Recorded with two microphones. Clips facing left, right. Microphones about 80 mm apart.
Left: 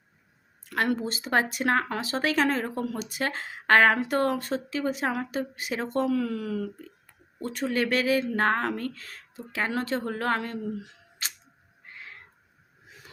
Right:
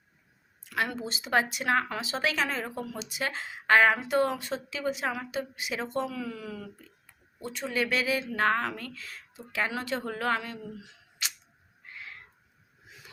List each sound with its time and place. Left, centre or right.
0.6 s speech: left
11.9 s cat: left